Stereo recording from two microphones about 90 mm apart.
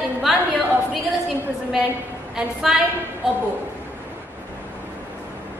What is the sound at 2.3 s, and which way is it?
Speech, 5° right (ahead or behind).